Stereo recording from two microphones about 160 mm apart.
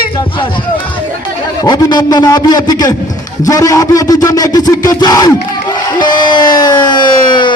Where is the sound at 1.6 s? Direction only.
25° left (ahead or behind).